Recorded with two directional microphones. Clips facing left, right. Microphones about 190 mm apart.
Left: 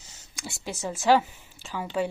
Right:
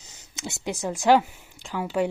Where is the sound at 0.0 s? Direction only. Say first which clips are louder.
Right 4 dB; 20° right (ahead or behind).